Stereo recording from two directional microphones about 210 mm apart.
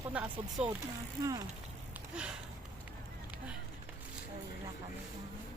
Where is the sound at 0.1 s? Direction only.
5° right (ahead or behind).